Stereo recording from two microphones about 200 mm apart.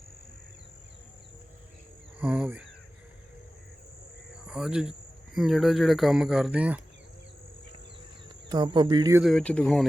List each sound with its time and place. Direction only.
2.1 s speech: 5° right (ahead or behind)
4.4 s speech: 5° right (ahead or behind)
8.4 s speech: 20° right (ahead or behind)
9.2 s speech: 5° left (ahead or behind)